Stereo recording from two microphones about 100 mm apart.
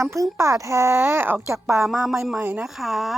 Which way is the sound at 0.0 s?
30° right (ahead or behind).